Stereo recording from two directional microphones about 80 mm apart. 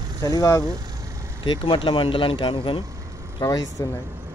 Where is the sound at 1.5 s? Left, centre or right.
Left.